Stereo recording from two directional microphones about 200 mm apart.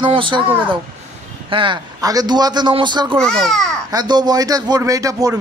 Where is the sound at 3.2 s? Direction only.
Centre (ahead or behind).